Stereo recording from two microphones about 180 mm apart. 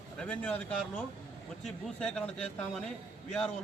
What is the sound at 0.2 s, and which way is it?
A man's voice, 5° left (ahead or behind).